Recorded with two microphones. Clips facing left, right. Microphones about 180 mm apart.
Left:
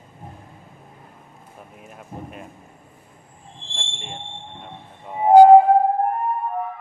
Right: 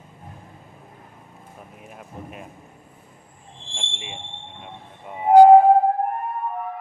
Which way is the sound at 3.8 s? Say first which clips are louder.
Left 1 dB; 5° right (ahead or behind).